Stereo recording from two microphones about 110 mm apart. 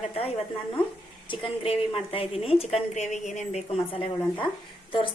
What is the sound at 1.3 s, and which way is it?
A woman's voice, 55° left (ahead or behind).